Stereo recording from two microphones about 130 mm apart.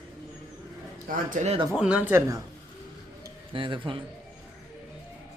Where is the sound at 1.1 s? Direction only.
70° right (ahead or behind).